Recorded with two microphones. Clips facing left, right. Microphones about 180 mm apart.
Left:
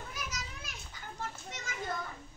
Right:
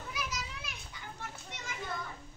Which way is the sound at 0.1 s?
50° left (ahead or behind).